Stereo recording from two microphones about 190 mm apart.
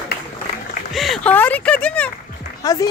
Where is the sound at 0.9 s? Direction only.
Centre (ahead or behind).